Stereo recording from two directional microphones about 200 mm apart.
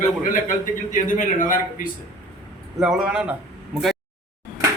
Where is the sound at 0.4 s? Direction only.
40° left (ahead or behind).